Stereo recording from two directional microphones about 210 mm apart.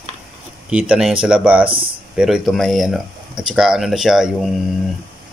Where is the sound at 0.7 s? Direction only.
5° right (ahead or behind).